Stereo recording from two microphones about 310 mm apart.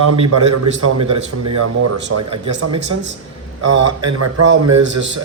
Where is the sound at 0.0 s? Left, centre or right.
Right.